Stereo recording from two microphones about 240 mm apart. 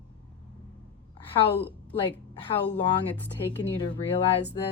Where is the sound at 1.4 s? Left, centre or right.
Left.